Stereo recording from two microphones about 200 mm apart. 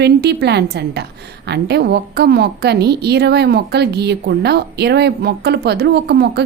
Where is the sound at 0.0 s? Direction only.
55° right (ahead or behind).